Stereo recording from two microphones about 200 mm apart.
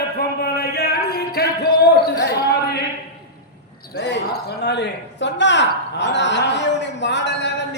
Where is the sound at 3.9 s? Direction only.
55° left (ahead or behind).